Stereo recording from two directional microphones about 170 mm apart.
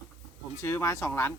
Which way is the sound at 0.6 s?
15° left (ahead or behind).